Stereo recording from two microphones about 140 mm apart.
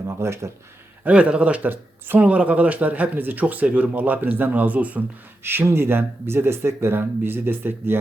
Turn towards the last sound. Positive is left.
turn(degrees=-15)  # may be behind; listen again after turning